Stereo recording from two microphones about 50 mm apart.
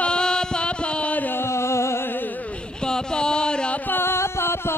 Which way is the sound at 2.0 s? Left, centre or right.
Left.